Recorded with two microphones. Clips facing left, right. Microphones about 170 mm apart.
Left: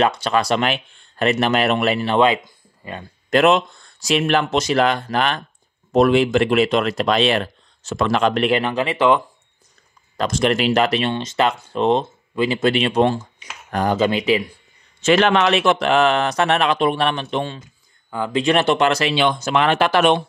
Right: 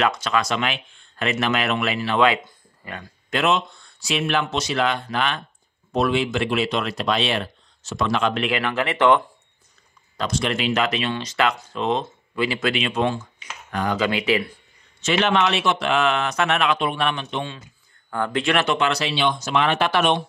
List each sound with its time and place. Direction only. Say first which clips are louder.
0.2 s speech: left 4 dB; 35° left (ahead or behind)
3.3 s speech: left 6 dB; 45° left (ahead or behind)
8.5 s speech: left 4 dB; 25° left (ahead or behind)
10.4 s speech: left 6 dB; 40° left (ahead or behind)
11.1 s speech: left 3 dB; 25° left (ahead or behind)
13.9 s speech: left 4 dB; 25° left (ahead or behind)
14.2 s speech: left 3 dB; 15° left (ahead or behind)
15.3 s speech: left 4 dB; 50° left (ahead or behind)
18.1 s speech: left 4 dB; 10° left (ahead or behind)
18.6 s speech: left 5 dB; 35° left (ahead or behind)
19.0 s speech: left 4 dB; 50° left (ahead or behind)